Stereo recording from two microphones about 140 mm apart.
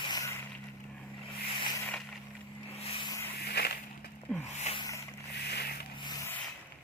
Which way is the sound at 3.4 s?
90° left.